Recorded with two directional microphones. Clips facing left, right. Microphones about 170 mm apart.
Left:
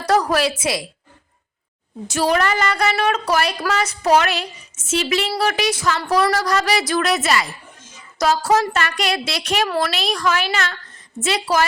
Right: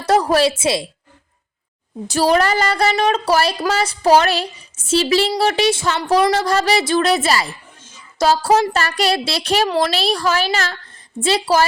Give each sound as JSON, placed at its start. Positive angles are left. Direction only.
{"t": 0.0, "sound": "a woman's voice", "side_deg": -25}
{"t": 2.0, "sound": "a woman's voice", "side_deg": -35}